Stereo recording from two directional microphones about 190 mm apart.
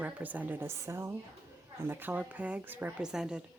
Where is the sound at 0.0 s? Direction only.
10° right (ahead or behind).